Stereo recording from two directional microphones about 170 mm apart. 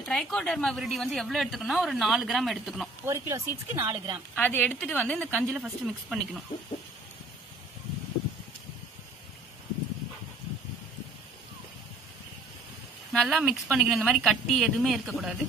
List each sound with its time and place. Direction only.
0.0 s a woman's voice: centre (ahead or behind)
3.1 s speech: 20° right (ahead or behind)
4.4 s a woman's voice: 10° left (ahead or behind)
13.1 s a woman's voice: centre (ahead or behind)